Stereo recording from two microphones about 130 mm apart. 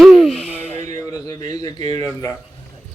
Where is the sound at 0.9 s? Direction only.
25° left (ahead or behind).